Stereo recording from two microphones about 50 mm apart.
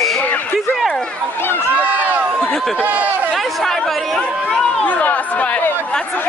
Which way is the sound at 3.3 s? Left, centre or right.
Centre.